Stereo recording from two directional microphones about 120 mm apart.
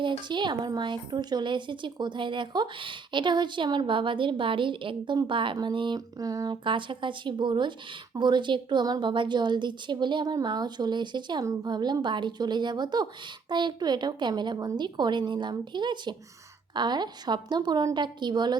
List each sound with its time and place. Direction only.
0.0 s speech: 40° right (ahead or behind)